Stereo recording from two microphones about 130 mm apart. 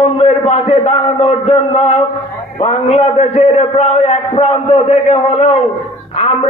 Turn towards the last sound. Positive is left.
turn(degrees=50)  # may be behind; listen again after turning